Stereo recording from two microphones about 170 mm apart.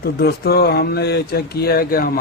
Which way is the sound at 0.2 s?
70° left (ahead or behind).